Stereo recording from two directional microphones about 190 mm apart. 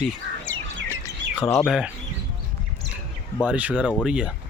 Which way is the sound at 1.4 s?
15° left (ahead or behind).